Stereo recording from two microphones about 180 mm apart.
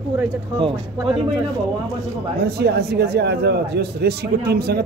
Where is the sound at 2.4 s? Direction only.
65° right (ahead or behind).